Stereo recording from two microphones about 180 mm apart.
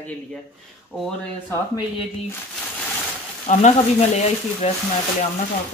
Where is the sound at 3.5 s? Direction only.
45° left (ahead or behind).